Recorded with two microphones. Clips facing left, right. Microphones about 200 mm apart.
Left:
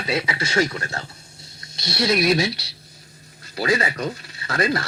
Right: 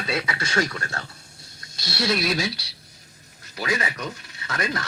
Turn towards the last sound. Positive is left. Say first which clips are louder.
# left 6 dB
turn(degrees=30)  # may be behind; listen again after turning